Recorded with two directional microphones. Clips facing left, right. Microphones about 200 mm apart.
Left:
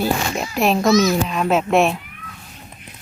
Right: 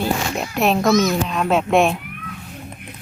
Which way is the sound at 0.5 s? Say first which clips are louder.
Left 1 dB; centre (ahead or behind).